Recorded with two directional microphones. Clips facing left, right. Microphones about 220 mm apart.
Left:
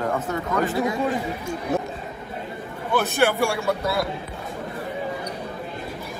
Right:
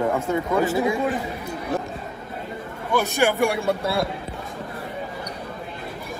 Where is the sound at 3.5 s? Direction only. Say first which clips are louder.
Right 1 dB; 25° right (ahead or behind).